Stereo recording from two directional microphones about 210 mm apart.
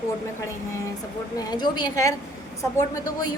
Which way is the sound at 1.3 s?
20° left (ahead or behind).